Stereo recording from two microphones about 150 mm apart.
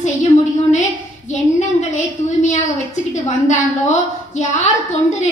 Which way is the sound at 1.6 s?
55° left (ahead or behind).